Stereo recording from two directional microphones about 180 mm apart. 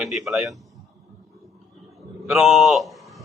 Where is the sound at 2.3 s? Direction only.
Centre (ahead or behind).